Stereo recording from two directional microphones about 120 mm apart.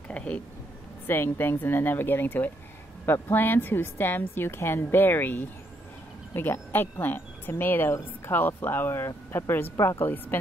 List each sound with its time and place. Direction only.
0.1 s a woman's voice: 10° left (ahead or behind)